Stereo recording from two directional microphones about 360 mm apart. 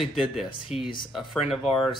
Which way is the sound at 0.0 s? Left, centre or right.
Centre.